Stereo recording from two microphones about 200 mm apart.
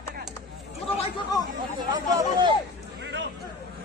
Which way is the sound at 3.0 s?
60° right (ahead or behind).